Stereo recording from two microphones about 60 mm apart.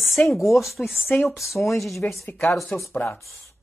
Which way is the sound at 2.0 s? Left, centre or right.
Left.